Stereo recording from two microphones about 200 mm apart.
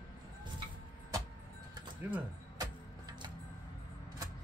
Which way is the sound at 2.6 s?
20° right (ahead or behind).